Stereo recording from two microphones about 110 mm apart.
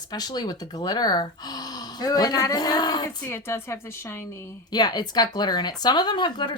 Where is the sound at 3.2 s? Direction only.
20° left (ahead or behind).